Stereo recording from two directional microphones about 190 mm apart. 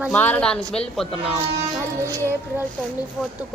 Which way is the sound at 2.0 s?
15° right (ahead or behind).